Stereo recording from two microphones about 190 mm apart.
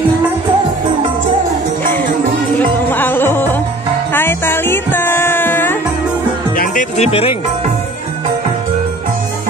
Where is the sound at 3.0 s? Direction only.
10° left (ahead or behind).